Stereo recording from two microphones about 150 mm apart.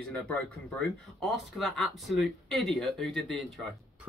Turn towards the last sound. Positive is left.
turn(degrees=0)  # may be behind; listen again after turning